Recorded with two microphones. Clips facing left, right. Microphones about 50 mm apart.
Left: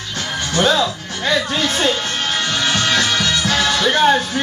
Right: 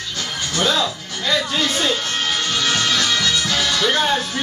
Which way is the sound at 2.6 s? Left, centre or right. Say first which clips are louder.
Left 3 dB; left.